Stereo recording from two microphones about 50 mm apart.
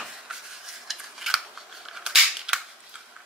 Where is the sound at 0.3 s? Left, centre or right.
Centre.